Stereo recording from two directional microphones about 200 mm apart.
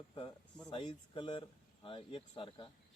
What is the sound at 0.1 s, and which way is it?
Speech, 25° left (ahead or behind).